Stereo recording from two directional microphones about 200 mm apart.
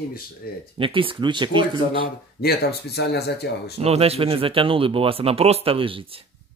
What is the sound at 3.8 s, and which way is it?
Speech, 30° right (ahead or behind).